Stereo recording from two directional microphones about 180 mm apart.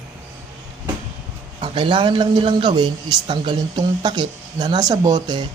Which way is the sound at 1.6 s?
25° right (ahead or behind).